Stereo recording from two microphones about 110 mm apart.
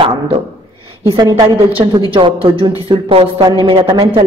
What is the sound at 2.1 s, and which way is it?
A woman's voice, 55° right (ahead or behind).